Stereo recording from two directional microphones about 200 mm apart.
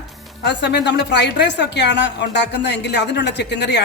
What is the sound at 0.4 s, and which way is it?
A woman's voice, 60° left (ahead or behind).